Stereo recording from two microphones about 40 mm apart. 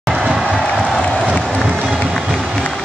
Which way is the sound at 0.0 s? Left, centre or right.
Centre.